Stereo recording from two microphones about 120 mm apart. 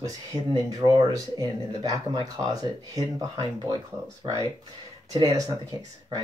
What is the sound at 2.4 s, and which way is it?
Speech, 30° right (ahead or behind).